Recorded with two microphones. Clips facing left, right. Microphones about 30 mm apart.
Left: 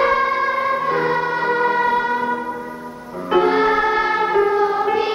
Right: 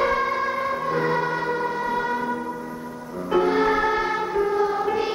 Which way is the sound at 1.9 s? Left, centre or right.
Left.